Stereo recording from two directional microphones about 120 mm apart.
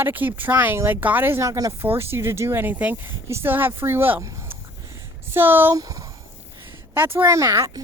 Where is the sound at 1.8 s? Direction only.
20° right (ahead or behind).